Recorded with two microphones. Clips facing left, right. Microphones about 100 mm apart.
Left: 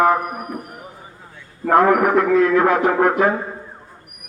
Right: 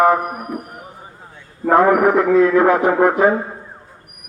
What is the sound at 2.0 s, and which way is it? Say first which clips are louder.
Speech: right 2 dB; 15° right (ahead or behind).